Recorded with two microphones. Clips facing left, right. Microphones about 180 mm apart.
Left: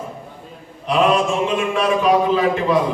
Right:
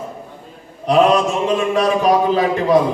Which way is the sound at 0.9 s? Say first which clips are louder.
Right 3 dB; 40° right (ahead or behind).